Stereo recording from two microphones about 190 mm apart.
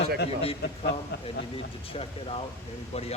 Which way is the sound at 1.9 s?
30° left (ahead or behind).